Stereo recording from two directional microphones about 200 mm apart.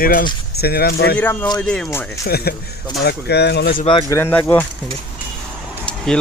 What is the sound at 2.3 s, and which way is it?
Speech, 50° left (ahead or behind).